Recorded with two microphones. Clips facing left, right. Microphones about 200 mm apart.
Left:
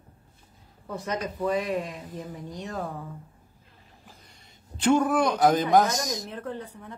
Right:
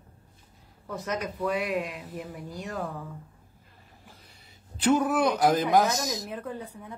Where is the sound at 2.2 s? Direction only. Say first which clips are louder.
Left 1 dB; 10° right (ahead or behind).